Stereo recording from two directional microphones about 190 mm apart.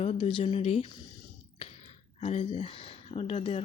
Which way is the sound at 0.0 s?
30° left (ahead or behind).